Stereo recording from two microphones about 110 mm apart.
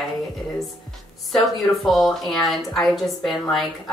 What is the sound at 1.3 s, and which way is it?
A woman's voice, centre (ahead or behind).